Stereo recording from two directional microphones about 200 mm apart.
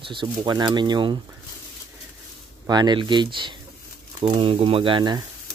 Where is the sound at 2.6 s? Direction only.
20° right (ahead or behind).